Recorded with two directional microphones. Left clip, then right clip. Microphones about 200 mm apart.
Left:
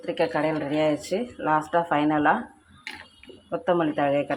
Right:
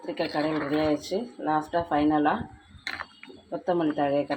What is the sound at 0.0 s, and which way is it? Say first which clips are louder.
Speech: left 4 dB; 10° left (ahead or behind).